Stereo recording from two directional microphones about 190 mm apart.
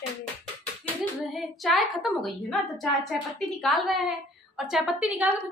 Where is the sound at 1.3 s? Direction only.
Centre (ahead or behind).